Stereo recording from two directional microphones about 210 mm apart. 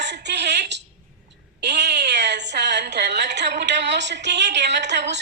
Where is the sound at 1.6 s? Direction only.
55° right (ahead or behind).